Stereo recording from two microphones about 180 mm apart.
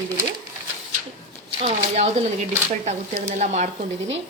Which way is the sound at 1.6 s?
40° right (ahead or behind).